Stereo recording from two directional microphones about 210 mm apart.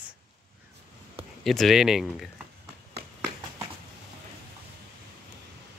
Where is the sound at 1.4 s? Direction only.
Centre (ahead or behind).